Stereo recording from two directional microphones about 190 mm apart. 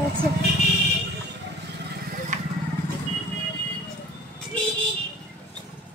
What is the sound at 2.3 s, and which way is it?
Vehicle, 40° right (ahead or behind).